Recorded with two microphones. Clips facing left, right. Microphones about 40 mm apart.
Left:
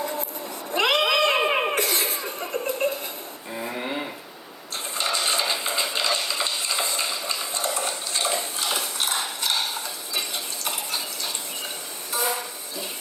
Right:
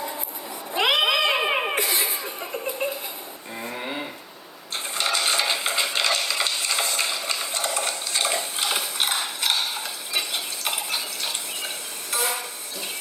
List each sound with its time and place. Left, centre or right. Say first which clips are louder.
0.0 s cat: left 3 dB; centre
1.7 s laughter: even; centre
2.6 s a sound: left 3 dB; centre
3.5 s a sound: left 2 dB; centre
7.8 s stir: right 1 dB; right
8.6 s ratchet: right 2 dB; centre
9.2 s stir: right 1 dB; centre
10.7 s water: right 2 dB; centre
12.2 s a sound: left 1 dB; centre